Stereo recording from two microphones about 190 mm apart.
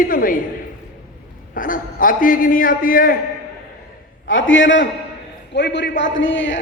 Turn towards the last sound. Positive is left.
turn(degrees=80)